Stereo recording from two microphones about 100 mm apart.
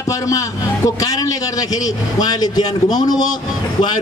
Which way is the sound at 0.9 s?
35° left (ahead or behind).